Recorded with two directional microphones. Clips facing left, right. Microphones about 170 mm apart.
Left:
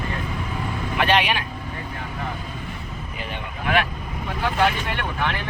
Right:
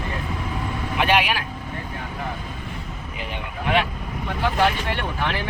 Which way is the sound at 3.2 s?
15° right (ahead or behind).